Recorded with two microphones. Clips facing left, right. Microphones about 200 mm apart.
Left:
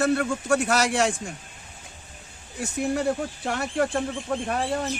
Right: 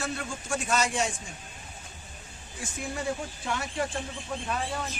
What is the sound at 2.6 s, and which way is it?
Speech, 65° left (ahead or behind).